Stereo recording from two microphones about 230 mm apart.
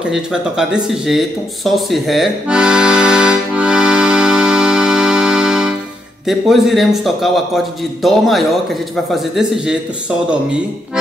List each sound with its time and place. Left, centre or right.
0.0 s a man's voice: centre
0.8 s accordion: centre
6.2 s a man's voice: centre